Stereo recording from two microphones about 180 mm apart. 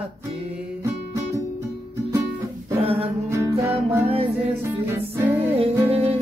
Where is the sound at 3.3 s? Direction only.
15° right (ahead or behind).